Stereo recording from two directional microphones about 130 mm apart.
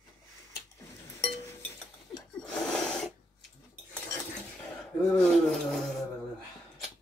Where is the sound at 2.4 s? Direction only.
5° left (ahead or behind).